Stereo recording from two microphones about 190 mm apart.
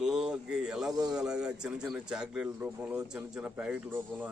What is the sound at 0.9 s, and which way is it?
Speech, 20° right (ahead or behind).